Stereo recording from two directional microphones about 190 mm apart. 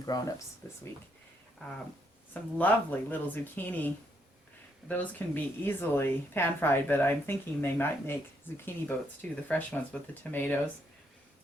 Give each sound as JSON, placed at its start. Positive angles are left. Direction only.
{"t": 0.0, "sound": "speech", "side_deg": 20}
{"t": 2.3, "sound": "speech", "side_deg": 10}